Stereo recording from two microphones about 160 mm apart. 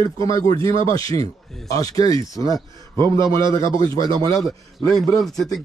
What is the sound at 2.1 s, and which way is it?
Speech, 25° right (ahead or behind).